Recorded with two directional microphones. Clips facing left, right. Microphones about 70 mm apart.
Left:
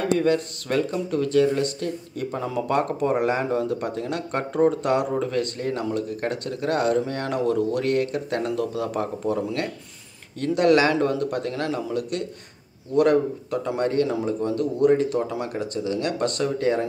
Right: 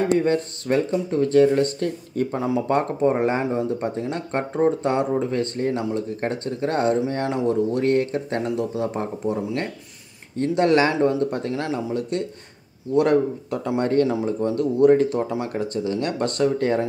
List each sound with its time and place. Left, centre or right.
0.2 s speech: right
2.3 s speech: right